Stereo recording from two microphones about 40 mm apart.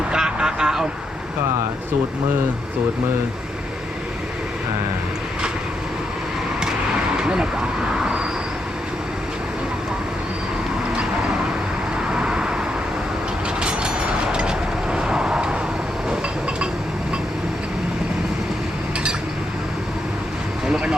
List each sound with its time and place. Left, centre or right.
0.1 s vehicle: right
7.2 s speech: right
8.0 s vehicle: centre
11.9 s vehicle: right
13.6 s train: right
14.3 s vehicle: right
20.7 s vehicle: centre